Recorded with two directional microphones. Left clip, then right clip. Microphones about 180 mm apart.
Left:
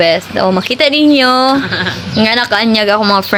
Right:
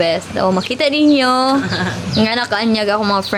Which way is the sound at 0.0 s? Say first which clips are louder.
Left 5 dB; 30° left (ahead or behind).